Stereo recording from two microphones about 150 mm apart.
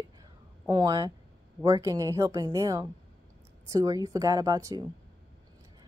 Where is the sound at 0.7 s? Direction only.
30° right (ahead or behind).